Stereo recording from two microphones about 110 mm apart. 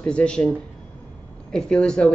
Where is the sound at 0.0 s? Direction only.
10° left (ahead or behind).